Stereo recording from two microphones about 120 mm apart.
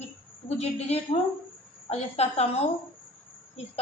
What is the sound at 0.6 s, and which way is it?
A woman's voice, 65° left (ahead or behind).